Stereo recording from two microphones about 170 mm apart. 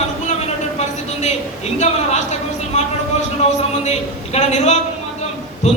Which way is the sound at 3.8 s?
40° left (ahead or behind).